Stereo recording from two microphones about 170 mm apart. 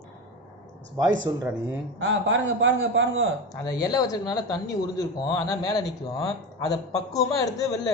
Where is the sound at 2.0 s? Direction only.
90° right.